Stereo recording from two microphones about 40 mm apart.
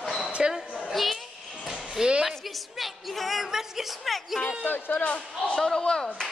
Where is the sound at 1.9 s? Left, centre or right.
Right.